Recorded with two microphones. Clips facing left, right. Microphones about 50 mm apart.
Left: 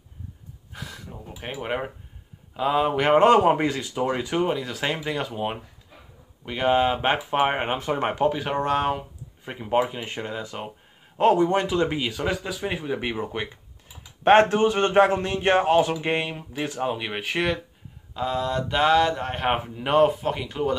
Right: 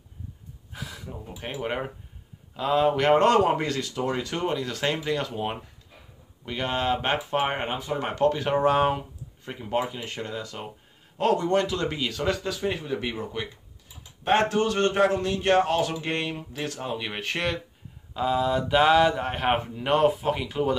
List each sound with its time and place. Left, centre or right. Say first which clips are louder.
0.7 s speech: right 1 dB; centre
7.7 s speech: left 4 dB; left
8.1 s speech: right 4 dB; centre
8.5 s speech: right 2 dB; centre
9.4 s a man's voice: left 4 dB; centre
14.2 s speech: left 6 dB; left
14.5 s speech: left 3 dB; left; by 20.7 s centre